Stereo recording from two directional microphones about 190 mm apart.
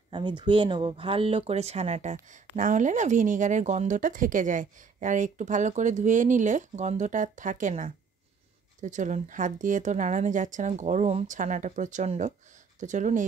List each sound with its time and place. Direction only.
0.1 s speech: 25° right (ahead or behind); by 13.3 s 40° right (ahead or behind)